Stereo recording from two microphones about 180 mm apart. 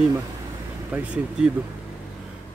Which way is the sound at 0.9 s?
5° right (ahead or behind).